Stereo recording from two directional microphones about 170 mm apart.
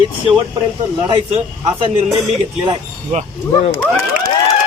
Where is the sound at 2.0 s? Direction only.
Centre (ahead or behind).